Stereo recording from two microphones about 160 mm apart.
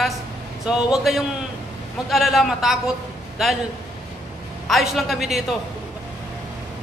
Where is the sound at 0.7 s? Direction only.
5° right (ahead or behind).